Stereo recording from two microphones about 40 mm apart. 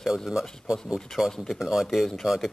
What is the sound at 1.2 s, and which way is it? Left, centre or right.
Music, centre.